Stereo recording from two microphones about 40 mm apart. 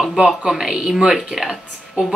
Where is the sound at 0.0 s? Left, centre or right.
Centre.